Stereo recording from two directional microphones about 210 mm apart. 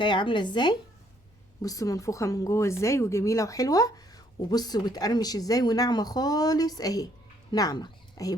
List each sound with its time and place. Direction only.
0.0 s a woman's voice: 20° left (ahead or behind)